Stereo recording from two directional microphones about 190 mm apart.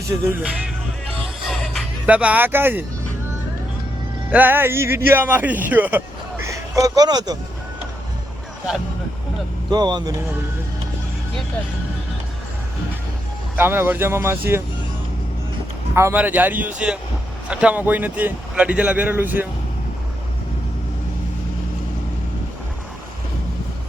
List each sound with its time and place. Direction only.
0.3 s speech: 5° right (ahead or behind)
1.2 s music: centre (ahead or behind)
2.0 s speech: 5° right (ahead or behind)
4.3 s speech: 10° right (ahead or behind)
9.7 s speech: 25° right (ahead or behind)
13.6 s speech: 10° right (ahead or behind)
16.0 s speech: 10° right (ahead or behind)